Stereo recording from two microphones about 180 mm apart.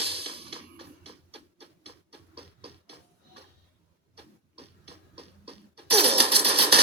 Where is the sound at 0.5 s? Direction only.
30° right (ahead or behind).